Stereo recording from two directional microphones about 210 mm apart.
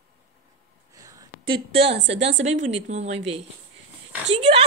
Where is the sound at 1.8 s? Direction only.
55° right (ahead or behind).